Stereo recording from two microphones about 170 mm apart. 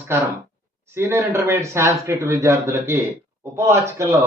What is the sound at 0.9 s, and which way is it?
Speech, 15° right (ahead or behind).